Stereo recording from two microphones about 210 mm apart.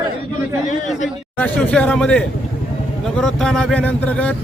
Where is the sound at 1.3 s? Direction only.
5° left (ahead or behind).